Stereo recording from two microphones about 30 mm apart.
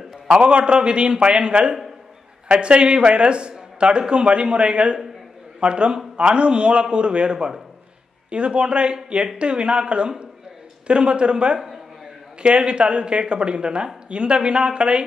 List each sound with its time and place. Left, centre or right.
0.3 s speech: right